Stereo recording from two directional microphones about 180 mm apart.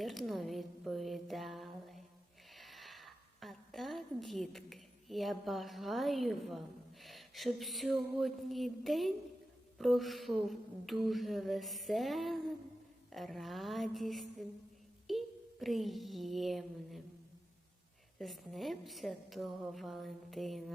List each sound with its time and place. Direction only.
0.0 s a sound: centre (ahead or behind)
7.0 s speech: centre (ahead or behind)
18.2 s speech: centre (ahead or behind)